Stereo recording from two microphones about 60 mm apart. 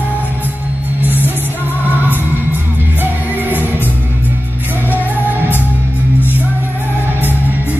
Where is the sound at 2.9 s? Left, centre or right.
Right.